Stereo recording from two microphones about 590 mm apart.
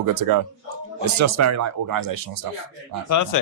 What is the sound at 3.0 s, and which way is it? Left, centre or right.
Speech, left.